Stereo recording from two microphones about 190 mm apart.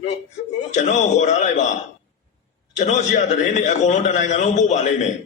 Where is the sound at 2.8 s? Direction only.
40° left (ahead or behind).